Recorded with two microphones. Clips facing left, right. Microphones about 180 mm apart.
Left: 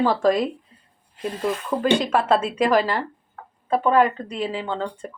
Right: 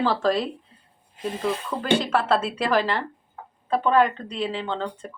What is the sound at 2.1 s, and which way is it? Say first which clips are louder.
Speech: left 2 dB; 10° left (ahead or behind).